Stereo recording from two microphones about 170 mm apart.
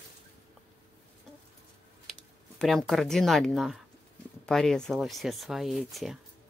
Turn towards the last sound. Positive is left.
turn(degrees=0)  # may be behind; listen again after turning